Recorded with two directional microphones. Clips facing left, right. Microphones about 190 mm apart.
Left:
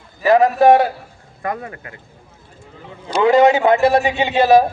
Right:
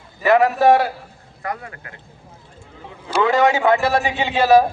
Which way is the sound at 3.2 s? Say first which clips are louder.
Left 4 dB; 20° left (ahead or behind).